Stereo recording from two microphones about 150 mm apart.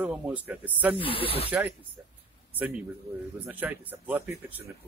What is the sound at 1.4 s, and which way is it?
Speech, 10° right (ahead or behind).